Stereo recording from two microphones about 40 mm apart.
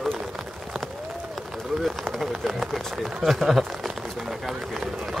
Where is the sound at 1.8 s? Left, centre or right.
Centre.